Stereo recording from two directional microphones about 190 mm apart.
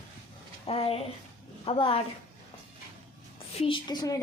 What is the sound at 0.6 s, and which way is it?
Speech, 30° left (ahead or behind).